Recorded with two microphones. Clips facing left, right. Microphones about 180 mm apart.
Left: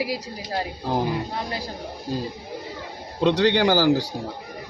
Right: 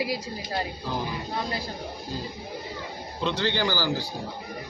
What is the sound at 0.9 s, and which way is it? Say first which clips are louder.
Speech: left 7 dB; 60° left (ahead or behind).